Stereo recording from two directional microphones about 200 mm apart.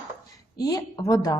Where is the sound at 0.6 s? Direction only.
15° left (ahead or behind).